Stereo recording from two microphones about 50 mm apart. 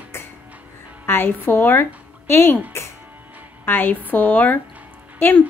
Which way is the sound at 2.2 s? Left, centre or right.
Left.